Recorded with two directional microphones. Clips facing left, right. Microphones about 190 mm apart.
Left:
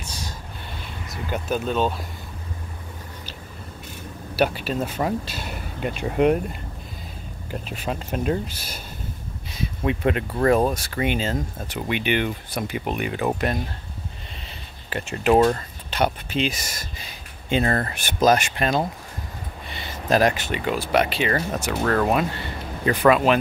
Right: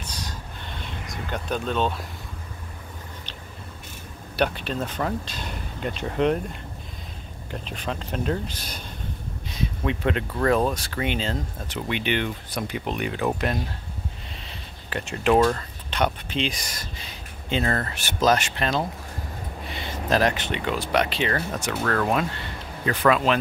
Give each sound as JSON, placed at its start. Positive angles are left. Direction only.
{"t": 0.0, "sound": "a sound", "side_deg": 10}
{"t": 1.0, "sound": "speech", "side_deg": 5}
{"t": 4.4, "sound": "speech", "side_deg": 5}
{"t": 7.6, "sound": "speech", "side_deg": 10}
{"t": 14.9, "sound": "speech", "side_deg": 5}
{"t": 15.3, "sound": "speech", "side_deg": 25}
{"t": 15.9, "sound": "speech", "side_deg": 5}